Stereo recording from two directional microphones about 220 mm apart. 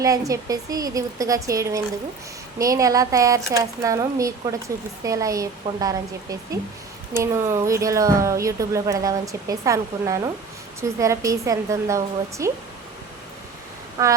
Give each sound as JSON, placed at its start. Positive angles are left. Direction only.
{"t": 0.0, "sound": "speech", "side_deg": -15}
{"t": 7.2, "sound": "speech", "side_deg": -15}
{"t": 14.0, "sound": "speech", "side_deg": -15}